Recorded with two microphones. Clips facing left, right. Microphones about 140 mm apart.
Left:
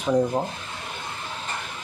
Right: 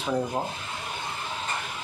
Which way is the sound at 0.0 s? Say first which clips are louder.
Left 6 dB; 15° left (ahead or behind).